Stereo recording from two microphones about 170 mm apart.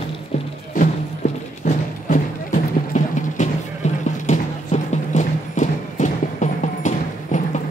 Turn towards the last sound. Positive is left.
turn(degrees=45)  # may be behind; listen again after turning